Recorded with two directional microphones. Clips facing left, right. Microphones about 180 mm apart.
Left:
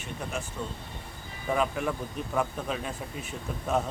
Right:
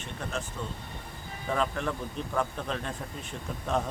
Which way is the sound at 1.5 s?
10° left (ahead or behind).